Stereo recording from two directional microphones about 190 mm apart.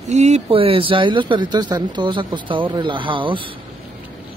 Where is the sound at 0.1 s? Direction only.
35° right (ahead or behind).